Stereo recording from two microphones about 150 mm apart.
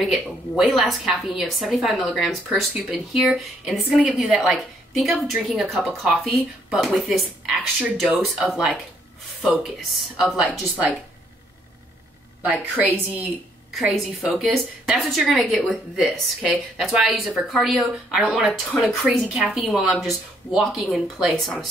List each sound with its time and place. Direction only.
0.0 s a woman's voice: centre (ahead or behind)
13.7 s a woman's voice: 5° right (ahead or behind)